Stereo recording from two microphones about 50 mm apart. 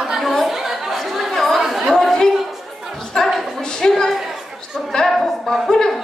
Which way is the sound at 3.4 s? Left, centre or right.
Centre.